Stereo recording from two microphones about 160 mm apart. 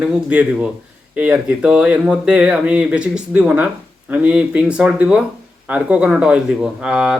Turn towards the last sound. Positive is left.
turn(degrees=-5)  # may be behind; listen again after turning